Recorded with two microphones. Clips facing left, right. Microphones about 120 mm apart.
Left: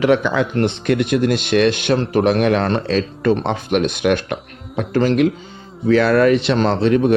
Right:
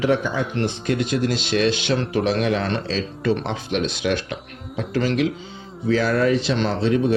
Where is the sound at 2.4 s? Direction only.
60° left (ahead or behind).